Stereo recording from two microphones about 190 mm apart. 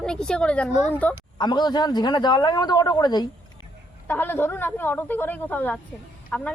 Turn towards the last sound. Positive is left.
turn(degrees=5)  # may be behind; listen again after turning